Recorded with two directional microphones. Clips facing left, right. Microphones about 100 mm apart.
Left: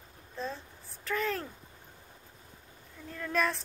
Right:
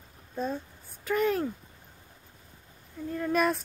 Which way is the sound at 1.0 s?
5° right (ahead or behind).